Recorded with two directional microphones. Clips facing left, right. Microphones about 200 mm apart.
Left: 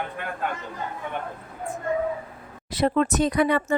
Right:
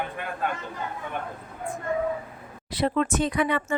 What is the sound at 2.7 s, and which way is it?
Speech, 45° left (ahead or behind).